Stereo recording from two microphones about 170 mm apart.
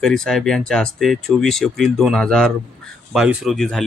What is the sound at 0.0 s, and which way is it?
Speech, centre (ahead or behind).